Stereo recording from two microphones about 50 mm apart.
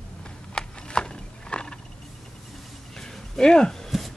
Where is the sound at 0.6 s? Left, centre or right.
Centre.